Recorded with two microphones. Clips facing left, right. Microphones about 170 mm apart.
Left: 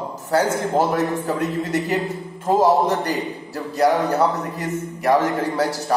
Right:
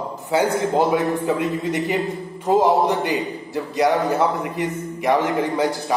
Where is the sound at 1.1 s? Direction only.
40° left (ahead or behind).